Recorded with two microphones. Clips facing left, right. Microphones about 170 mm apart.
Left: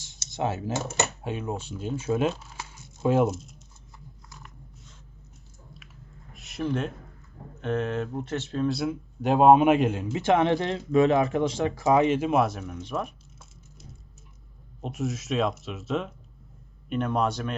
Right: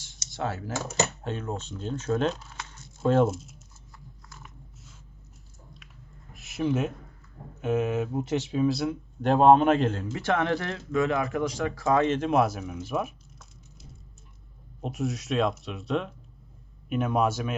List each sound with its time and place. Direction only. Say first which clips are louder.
0.0 s computer keyboard: left 3 dB; 20° left (ahead or behind)
1.2 s speech: left 1 dB; 10° left (ahead or behind)
3.2 s speech: left 1 dB; centre (ahead or behind)
4.3 s a sound: even; centre (ahead or behind)
6.3 s a sound: right 2 dB; centre (ahead or behind)
7.6 s speech: right 2 dB; 5° right (ahead or behind)
14.8 s speech: even; centre (ahead or behind)